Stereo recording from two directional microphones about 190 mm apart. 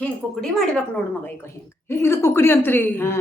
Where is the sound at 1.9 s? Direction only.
15° left (ahead or behind).